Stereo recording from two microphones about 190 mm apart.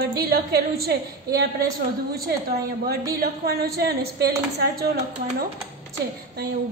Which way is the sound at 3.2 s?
55° right (ahead or behind).